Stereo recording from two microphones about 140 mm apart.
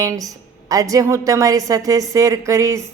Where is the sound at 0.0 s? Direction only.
25° right (ahead or behind).